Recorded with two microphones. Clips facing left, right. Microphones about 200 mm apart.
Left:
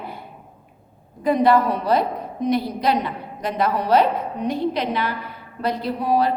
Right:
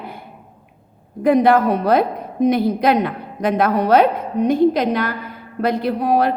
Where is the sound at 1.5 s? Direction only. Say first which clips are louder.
Right 3 dB; 50° right (ahead or behind).